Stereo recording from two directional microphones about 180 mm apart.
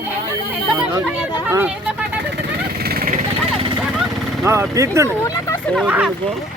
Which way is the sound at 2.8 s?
55° right (ahead or behind).